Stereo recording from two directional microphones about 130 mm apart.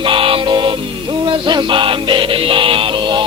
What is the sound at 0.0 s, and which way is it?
Music, 40° right (ahead or behind).